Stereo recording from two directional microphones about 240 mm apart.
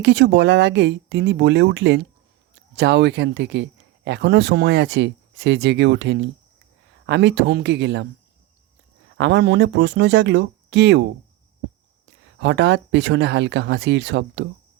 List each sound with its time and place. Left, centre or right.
0.0 s speech: right
9.1 s speech: right